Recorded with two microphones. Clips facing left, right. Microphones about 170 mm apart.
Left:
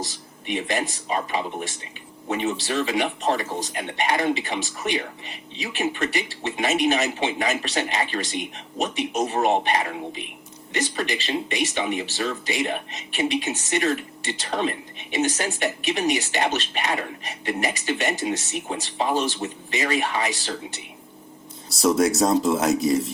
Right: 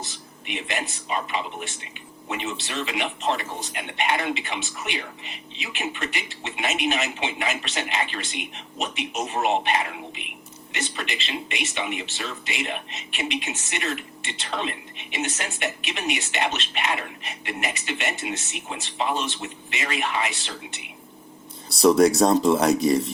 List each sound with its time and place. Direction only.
0.0 s speech: 40° left (ahead or behind)
21.8 s speech: centre (ahead or behind)